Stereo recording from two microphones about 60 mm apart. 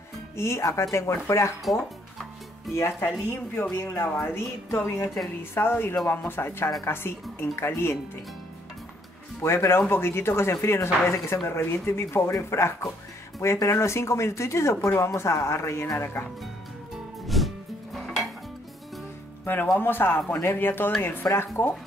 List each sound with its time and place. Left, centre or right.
0.4 s speech: left
2.7 s speech: left
9.4 s speech: left
17.4 s music: centre
17.9 s dishes: centre
19.4 s speech: left